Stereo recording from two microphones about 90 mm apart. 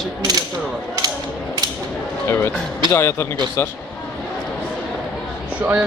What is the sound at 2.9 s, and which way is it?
Speech, 30° left (ahead or behind).